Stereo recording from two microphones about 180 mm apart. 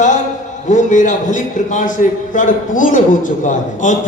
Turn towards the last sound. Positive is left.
turn(degrees=45)  # may be behind; listen again after turning